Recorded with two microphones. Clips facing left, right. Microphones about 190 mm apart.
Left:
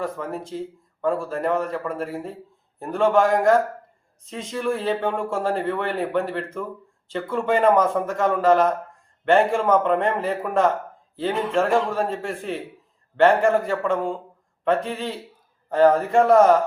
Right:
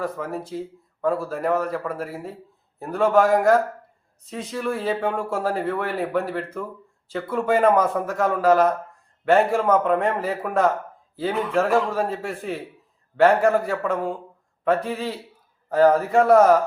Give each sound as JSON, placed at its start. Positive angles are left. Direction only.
{"t": 0.0, "sound": "a man's voice", "side_deg": -5}